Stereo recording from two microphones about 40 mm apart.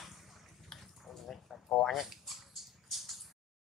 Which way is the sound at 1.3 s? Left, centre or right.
Centre.